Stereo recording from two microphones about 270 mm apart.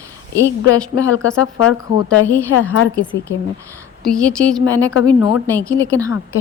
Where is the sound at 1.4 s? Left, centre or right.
Left.